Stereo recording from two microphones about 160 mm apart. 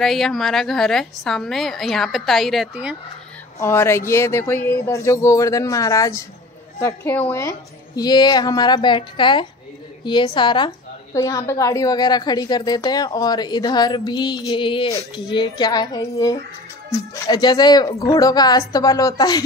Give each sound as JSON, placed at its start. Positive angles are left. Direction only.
{"t": 0.0, "sound": "a woman's voice", "side_deg": 0}
{"t": 3.5, "sound": "speech", "side_deg": 15}
{"t": 7.4, "sound": "a woman's voice", "side_deg": 25}